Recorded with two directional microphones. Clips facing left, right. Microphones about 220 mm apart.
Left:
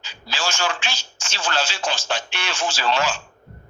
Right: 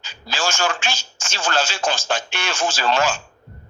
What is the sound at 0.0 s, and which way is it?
Speech, 45° right (ahead or behind).